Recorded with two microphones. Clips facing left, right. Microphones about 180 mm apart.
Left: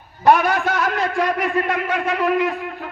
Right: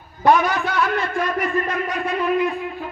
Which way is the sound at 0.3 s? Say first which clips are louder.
Left 1 dB; 55° left (ahead or behind).